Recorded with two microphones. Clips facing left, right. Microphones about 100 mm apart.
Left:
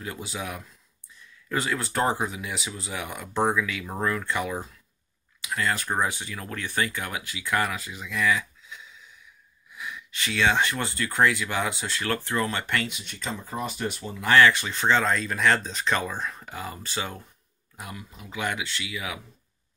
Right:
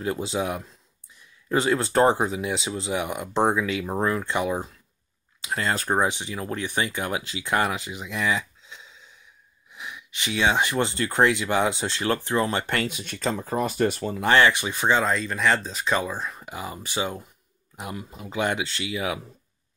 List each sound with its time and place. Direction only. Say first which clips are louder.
0.0 s speech: right 8 dB; 30° right (ahead or behind)
6.0 s speech: right 4 dB; 20° right (ahead or behind); by 14.2 s 45° right (ahead or behind)
14.2 s speech: even; 20° right (ahead or behind)